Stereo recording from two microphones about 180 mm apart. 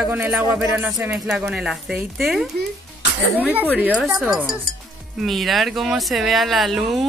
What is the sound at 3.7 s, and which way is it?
Speech, 5° right (ahead or behind).